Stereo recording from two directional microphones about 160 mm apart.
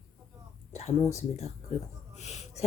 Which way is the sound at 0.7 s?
45° left (ahead or behind).